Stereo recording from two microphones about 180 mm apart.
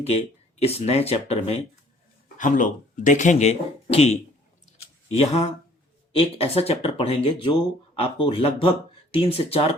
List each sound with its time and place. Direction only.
0.0 s speech: 35° left (ahead or behind)
2.4 s speech: 45° left (ahead or behind)
4.6 s a sound: 35° left (ahead or behind)
6.1 s speech: 35° left (ahead or behind)